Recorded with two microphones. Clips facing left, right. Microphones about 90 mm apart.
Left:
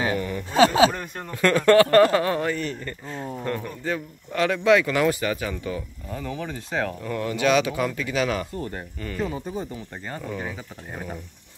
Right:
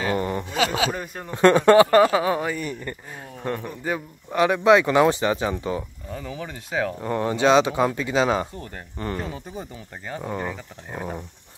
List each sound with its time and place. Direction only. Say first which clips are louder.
0.1 s a sound: right 3 dB; 35° right (ahead or behind)
0.5 s speech: left 9 dB; 35° left (ahead or behind)
1.3 s a man's voice: right 3 dB; 25° right (ahead or behind)
6.1 s speech: left 2 dB; 5° right (ahead or behind)
7.0 s a man's voice: right 3 dB; 30° right (ahead or behind)
9.3 s speech: left 4 dB; centre (ahead or behind)